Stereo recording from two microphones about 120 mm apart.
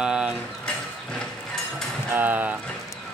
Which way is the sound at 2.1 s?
15° right (ahead or behind).